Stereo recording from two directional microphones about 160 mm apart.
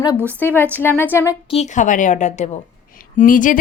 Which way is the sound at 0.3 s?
10° left (ahead or behind).